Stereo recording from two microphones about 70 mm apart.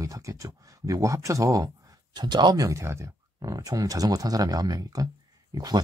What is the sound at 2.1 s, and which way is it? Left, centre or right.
Speech, right.